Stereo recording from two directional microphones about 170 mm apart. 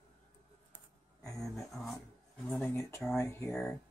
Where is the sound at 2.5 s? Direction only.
15° left (ahead or behind).